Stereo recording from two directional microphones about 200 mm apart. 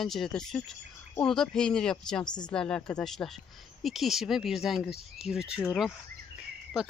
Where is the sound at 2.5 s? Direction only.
5° left (ahead or behind).